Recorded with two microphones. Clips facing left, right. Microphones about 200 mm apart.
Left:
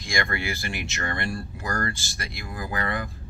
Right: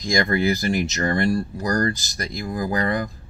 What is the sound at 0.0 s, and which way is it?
Speech, 40° right (ahead or behind).